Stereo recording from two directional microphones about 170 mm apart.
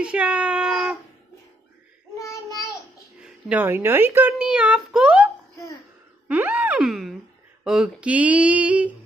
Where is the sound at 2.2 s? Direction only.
20° left (ahead or behind).